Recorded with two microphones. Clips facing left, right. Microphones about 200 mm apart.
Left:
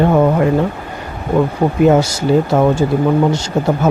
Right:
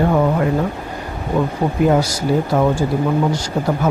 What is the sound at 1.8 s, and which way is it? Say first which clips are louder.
Speech: left 4 dB; 25° left (ahead or behind).